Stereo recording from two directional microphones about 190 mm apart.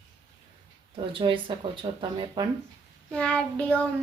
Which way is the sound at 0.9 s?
25° right (ahead or behind).